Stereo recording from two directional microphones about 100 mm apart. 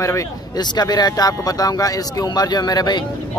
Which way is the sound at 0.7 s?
45° left (ahead or behind).